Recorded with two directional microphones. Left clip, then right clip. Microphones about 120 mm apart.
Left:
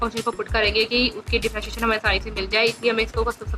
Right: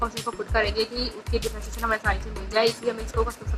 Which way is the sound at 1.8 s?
25° left (ahead or behind).